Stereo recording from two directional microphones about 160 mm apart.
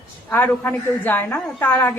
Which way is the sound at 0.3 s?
10° left (ahead or behind).